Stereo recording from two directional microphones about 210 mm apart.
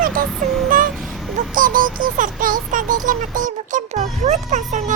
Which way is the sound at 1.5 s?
40° right (ahead or behind).